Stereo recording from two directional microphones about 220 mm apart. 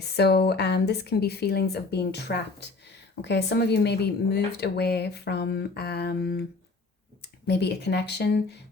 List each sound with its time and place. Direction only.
0.0 s speech: 45° left (ahead or behind)